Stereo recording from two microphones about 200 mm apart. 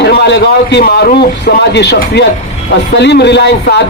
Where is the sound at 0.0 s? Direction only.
55° left (ahead or behind).